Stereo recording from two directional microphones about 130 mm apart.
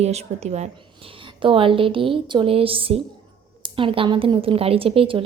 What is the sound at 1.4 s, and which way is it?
A woman's voice, 40° right (ahead or behind).